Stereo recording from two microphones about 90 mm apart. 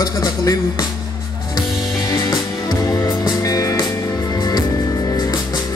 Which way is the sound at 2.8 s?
40° left (ahead or behind).